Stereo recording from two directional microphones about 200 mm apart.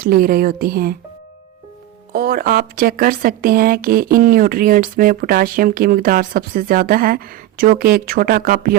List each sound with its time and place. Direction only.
0.0 s speech: 45° right (ahead or behind)
2.1 s speech: 45° right (ahead or behind)